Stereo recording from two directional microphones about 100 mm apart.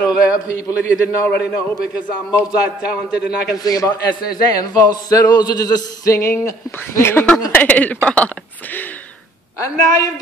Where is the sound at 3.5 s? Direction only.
40° left (ahead or behind).